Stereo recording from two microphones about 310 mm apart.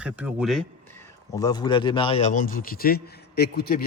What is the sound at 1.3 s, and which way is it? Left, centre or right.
A man's voice, centre.